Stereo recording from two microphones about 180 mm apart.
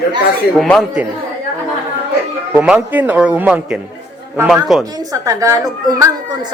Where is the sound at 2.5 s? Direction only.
5° right (ahead or behind).